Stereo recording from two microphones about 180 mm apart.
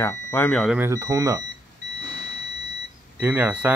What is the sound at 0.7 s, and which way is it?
Speech, 15° right (ahead or behind).